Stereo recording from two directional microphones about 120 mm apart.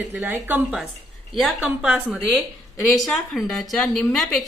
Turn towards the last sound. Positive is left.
turn(degrees=0)  # may be behind; listen again after turning